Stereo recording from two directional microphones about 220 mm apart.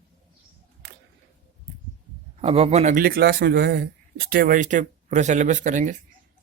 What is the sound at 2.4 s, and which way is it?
A man's voice, 25° right (ahead or behind).